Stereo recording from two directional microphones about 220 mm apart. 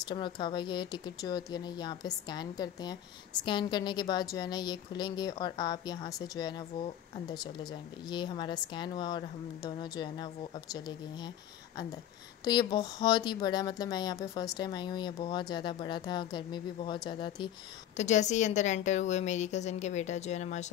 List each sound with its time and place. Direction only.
0.0 s speech: 20° left (ahead or behind)
17.9 s a woman's voice: 30° left (ahead or behind)